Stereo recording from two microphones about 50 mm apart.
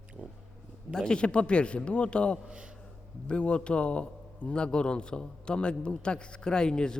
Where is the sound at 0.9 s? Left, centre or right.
Centre.